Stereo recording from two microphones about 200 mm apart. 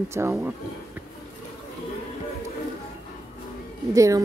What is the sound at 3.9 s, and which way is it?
Speech, 15° right (ahead or behind).